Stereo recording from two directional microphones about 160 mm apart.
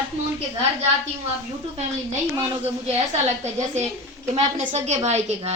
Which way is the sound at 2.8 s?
45° right (ahead or behind).